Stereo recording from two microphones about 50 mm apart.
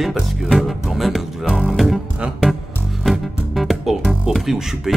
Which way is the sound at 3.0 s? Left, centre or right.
Centre.